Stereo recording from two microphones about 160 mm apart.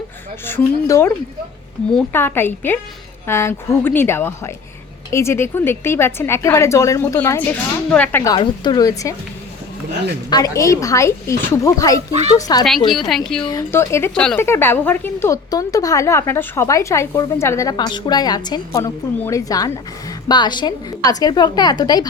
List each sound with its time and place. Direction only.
0.4 s a woman's voice: 15° left (ahead or behind)
2.1 s a woman's voice: 15° left (ahead or behind)
8.3 s speech: 25° left (ahead or behind)
10.2 s speech: 25° left (ahead or behind)
12.9 s a woman's voice: centre (ahead or behind)
13.4 s a woman's voice: 25° left (ahead or behind)